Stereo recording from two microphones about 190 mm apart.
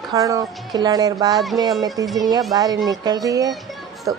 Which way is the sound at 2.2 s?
20° right (ahead or behind).